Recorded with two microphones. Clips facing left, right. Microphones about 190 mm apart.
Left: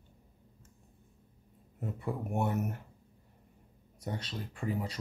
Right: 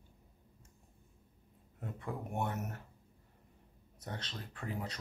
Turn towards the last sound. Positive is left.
turn(degrees=5)  # may be behind; listen again after turning